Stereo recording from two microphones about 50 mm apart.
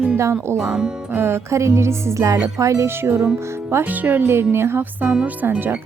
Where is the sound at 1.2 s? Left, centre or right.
Right.